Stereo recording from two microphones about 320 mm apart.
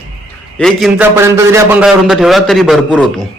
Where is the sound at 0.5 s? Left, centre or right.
Centre.